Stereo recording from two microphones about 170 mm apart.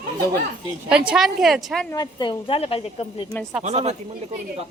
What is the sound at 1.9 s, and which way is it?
A woman's voice, 25° left (ahead or behind).